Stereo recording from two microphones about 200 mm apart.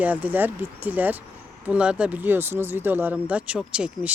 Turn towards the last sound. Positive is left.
turn(degrees=-5)  # may be behind; listen again after turning